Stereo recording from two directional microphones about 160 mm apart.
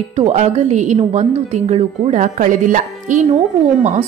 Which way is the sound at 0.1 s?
40° right (ahead or behind).